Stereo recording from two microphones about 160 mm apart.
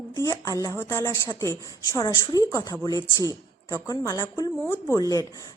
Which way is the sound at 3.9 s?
20° left (ahead or behind).